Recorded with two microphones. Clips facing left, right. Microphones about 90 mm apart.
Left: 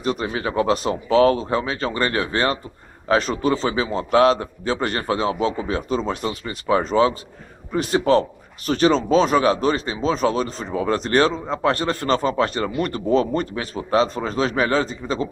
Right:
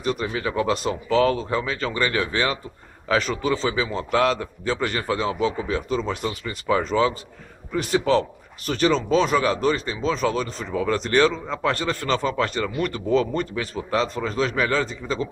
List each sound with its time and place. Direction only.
0.0 s speech: 30° left (ahead or behind)